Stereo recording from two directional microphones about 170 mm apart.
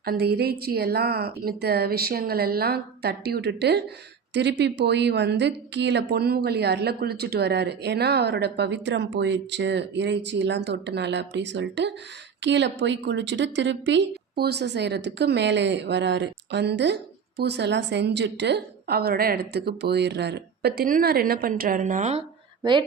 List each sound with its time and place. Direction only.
0.0 s a woman's voice: 65° right (ahead or behind); by 14.0 s 90° right
14.3 s speech: 70° right (ahead or behind); by 22.2 s 45° right (ahead or behind)